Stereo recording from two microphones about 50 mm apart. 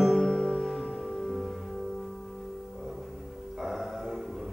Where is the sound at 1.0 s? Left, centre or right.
Centre.